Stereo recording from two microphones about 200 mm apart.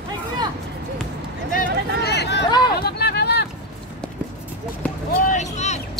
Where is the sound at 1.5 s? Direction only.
55° left (ahead or behind).